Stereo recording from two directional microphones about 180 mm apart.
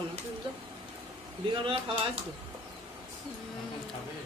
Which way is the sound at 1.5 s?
30° right (ahead or behind).